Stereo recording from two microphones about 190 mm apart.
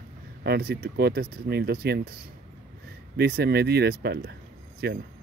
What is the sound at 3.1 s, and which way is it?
Speech, 55° right (ahead or behind).